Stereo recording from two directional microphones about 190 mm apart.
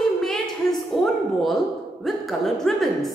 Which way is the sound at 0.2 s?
Centre (ahead or behind).